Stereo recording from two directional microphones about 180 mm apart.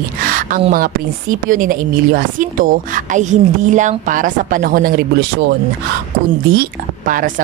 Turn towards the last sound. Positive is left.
turn(degrees=-50)  # may be behind; listen again after turning